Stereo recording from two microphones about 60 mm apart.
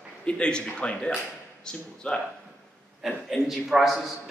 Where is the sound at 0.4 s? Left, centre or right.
Centre.